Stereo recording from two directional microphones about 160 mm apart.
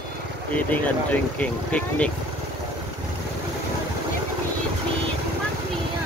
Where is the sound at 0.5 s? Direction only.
10° left (ahead or behind).